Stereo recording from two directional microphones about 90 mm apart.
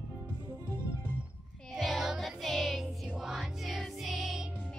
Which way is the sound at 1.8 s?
Centre (ahead or behind).